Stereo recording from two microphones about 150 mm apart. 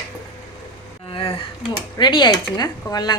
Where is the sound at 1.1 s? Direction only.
35° left (ahead or behind).